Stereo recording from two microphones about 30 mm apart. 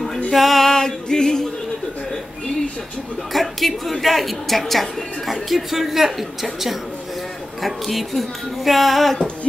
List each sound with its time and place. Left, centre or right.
0.3 s music: centre
0.7 s music: left
3.3 s a woman's voice: centre